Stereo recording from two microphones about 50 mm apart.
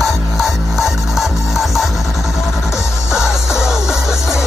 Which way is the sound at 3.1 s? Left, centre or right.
Left.